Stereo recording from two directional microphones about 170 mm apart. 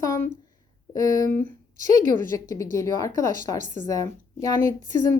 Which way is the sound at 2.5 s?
20° left (ahead or behind).